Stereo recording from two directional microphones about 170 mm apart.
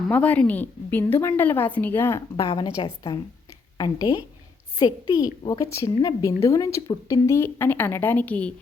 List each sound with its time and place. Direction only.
0.1 s a woman's voice: 10° left (ahead or behind)
2.3 s a woman's voice: 25° left (ahead or behind); by 8.5 s 10° left (ahead or behind)